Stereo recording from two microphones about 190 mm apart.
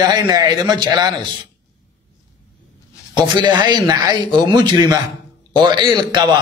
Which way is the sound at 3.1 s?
25° right (ahead or behind).